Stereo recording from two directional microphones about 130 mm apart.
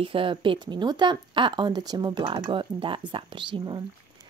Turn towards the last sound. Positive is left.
turn(degrees=-35)  # may be behind; listen again after turning